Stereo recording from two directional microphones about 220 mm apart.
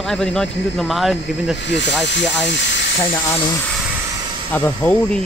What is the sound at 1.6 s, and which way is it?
Speech, 55° left (ahead or behind).